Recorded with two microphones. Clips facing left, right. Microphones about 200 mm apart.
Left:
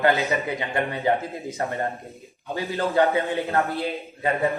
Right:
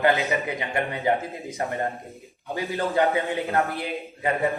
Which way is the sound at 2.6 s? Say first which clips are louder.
Left 2 dB; 15° right (ahead or behind).